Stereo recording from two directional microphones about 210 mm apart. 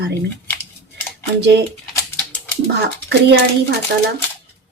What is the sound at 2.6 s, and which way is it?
Speech, 55° right (ahead or behind).